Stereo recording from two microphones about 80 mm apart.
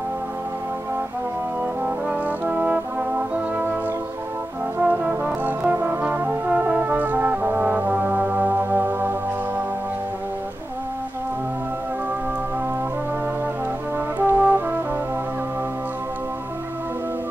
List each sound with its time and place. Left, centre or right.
2.0 s brass instrument: centre
4.7 s brass instrument: centre
14.2 s brass instrument: right